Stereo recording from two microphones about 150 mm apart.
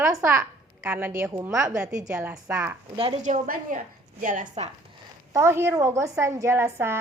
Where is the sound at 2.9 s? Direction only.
35° right (ahead or behind).